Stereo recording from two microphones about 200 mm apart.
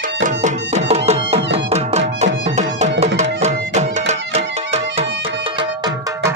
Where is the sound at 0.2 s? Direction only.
35° right (ahead or behind).